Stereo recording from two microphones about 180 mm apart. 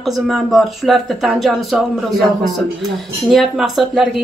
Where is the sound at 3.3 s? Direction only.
Centre (ahead or behind).